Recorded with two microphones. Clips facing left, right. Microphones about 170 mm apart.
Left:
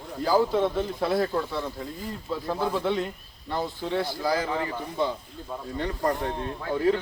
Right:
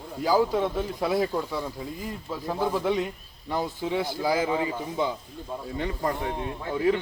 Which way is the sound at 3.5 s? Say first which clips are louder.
Right 1 dB; 15° right (ahead or behind).